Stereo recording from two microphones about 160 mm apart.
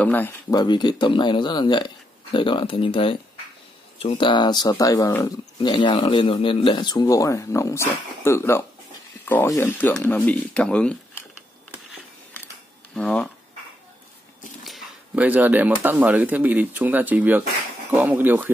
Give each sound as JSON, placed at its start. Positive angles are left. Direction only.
{"t": 0.0, "sound": "speech", "side_deg": 10}
{"t": 0.5, "sound": "speech", "side_deg": 25}
{"t": 12.9, "sound": "speech", "side_deg": 5}
{"t": 14.6, "sound": "speech", "side_deg": -5}